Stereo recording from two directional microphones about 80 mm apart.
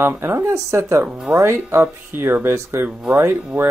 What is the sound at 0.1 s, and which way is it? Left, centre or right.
Speech, right.